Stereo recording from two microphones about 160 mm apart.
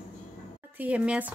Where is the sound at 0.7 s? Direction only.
10° right (ahead or behind).